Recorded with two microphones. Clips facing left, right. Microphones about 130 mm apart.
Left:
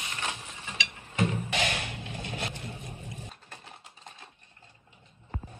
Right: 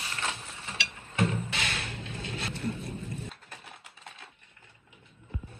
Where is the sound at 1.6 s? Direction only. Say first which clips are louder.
Left 4 dB; 70° left (ahead or behind).